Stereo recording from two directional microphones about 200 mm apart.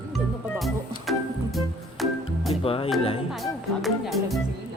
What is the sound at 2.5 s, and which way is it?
Music, 30° left (ahead or behind).